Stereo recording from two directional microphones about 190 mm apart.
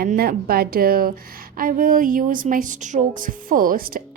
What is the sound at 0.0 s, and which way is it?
A woman's voice, 50° right (ahead or behind).